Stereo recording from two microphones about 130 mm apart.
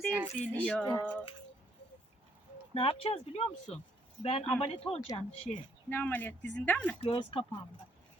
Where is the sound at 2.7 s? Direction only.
50° left (ahead or behind).